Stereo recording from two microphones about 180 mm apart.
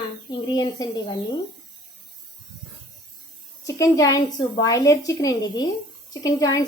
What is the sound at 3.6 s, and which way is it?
A woman's voice, 20° left (ahead or behind).